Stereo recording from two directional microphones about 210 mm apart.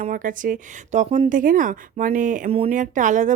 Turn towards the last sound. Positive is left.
turn(degrees=-35)  # may be behind; listen again after turning